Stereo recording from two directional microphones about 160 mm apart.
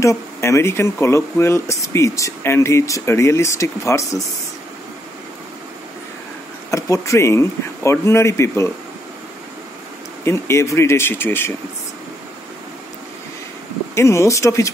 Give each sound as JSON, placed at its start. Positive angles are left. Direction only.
{"t": 0.0, "sound": "speech", "side_deg": 20}
{"t": 6.7, "sound": "speech", "side_deg": 20}
{"t": 10.2, "sound": "speech", "side_deg": 15}
{"t": 13.9, "sound": "speech", "side_deg": 20}